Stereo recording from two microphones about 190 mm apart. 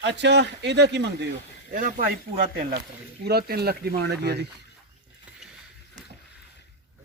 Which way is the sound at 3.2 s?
55° right (ahead or behind).